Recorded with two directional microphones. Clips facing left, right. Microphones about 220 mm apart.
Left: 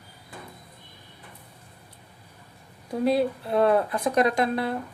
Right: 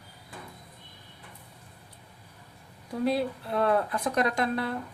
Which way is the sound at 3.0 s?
15° left (ahead or behind).